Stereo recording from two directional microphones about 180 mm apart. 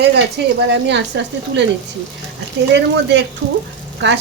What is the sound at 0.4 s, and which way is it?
Speech, 75° right (ahead or behind).